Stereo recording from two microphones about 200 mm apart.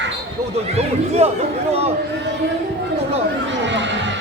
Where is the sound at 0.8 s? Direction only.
30° right (ahead or behind).